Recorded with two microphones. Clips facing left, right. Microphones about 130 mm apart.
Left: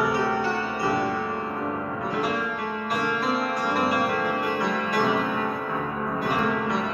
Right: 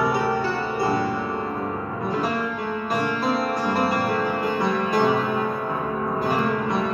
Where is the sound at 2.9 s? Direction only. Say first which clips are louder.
Right 2 dB; 30° right (ahead or behind).